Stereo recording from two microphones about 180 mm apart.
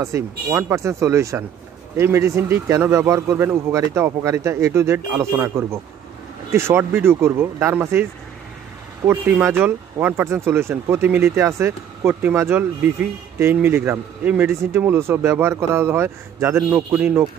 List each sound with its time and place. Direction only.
0.0 s speech: 15° right (ahead or behind)